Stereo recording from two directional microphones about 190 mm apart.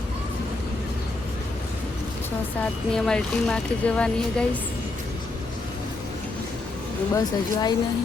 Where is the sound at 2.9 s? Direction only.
5° left (ahead or behind).